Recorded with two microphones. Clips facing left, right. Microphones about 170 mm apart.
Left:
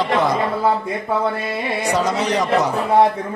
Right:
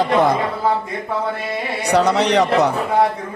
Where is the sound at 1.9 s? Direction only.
70° right (ahead or behind).